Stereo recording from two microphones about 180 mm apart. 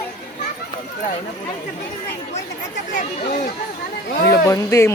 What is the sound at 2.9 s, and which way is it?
Speech, 40° left (ahead or behind).